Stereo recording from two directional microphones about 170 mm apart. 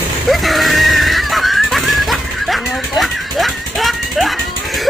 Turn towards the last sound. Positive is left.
turn(degrees=0)  # may be behind; listen again after turning